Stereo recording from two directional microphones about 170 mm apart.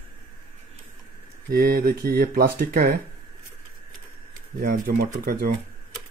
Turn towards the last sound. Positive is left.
turn(degrees=-60)  # may be behind; listen again after turning